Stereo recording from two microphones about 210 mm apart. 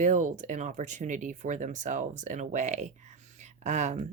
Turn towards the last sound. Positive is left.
turn(degrees=-35)  # may be behind; listen again after turning